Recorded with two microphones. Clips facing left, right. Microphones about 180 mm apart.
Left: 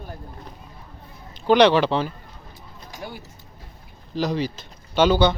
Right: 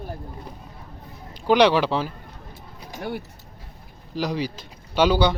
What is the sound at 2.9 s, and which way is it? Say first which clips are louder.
Speech: right 6 dB; 60° right (ahead or behind).